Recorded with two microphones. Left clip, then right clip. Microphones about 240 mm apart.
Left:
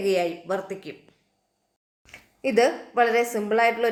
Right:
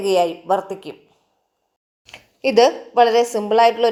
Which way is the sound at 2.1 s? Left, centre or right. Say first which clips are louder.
Right 6 dB; right.